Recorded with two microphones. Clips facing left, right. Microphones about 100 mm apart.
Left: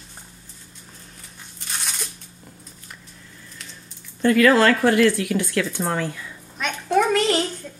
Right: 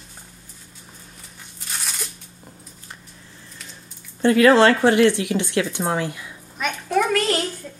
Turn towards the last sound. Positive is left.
turn(degrees=20)  # may be behind; listen again after turning